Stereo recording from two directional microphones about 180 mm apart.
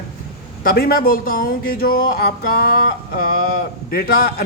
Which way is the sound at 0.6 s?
55° left (ahead or behind).